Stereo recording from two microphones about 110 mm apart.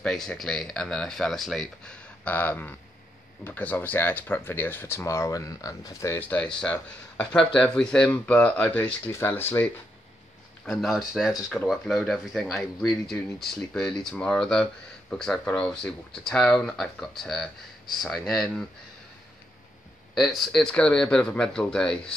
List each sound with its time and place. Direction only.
0.0 s speech: 5° left (ahead or behind)
2.2 s speech: 15° left (ahead or behind)
10.6 s speech: centre (ahead or behind)
20.2 s speech: centre (ahead or behind)